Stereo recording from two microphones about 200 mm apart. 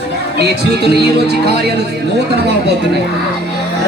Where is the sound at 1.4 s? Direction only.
55° right (ahead or behind).